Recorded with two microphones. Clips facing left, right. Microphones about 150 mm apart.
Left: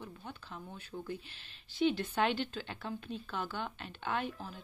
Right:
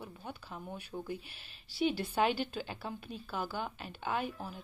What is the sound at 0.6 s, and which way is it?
Speech, 20° right (ahead or behind).